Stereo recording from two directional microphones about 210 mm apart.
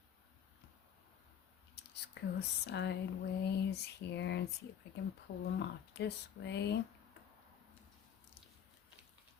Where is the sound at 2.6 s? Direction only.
55° left (ahead or behind).